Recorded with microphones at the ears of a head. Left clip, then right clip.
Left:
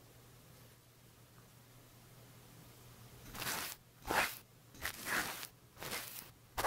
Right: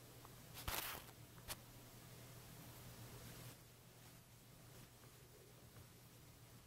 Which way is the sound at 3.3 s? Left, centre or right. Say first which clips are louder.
Left 19 dB; left.